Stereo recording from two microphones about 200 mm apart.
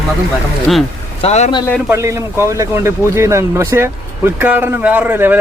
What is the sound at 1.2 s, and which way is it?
Speech, 30° left (ahead or behind).